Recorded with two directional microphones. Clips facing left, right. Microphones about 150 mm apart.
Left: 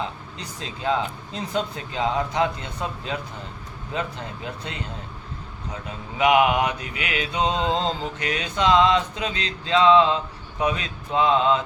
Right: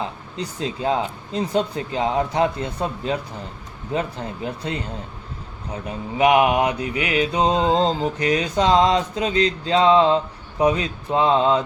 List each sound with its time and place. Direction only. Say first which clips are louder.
0.3 s mantra: right 8 dB; 35° right (ahead or behind)
6.1 s mantra: right 2 dB; 35° right (ahead or behind)